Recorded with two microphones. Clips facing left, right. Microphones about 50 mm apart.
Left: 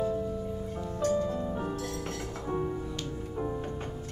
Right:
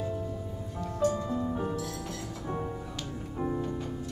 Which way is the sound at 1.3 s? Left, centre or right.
Centre.